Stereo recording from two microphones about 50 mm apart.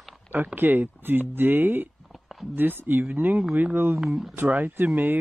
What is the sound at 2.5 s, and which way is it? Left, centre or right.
Speech, right.